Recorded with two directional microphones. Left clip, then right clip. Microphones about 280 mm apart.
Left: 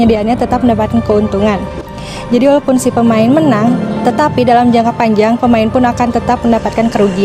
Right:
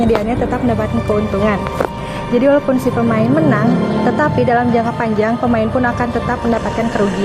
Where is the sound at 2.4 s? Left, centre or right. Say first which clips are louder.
Left 3 dB; left.